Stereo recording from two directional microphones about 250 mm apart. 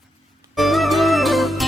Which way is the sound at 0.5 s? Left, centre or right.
Centre.